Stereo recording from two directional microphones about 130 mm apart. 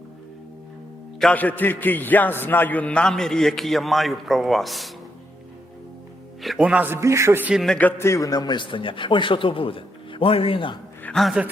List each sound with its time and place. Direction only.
1.2 s a man's voice: 10° left (ahead or behind)
6.4 s a man's voice: 5° right (ahead or behind); by 7.5 s 20° right (ahead or behind)
7.5 s a man's voice: centre (ahead or behind)
7.8 s a man's voice: 15° left (ahead or behind); by 10.8 s 45° left (ahead or behind)
11.0 s a man's voice: 5° left (ahead or behind)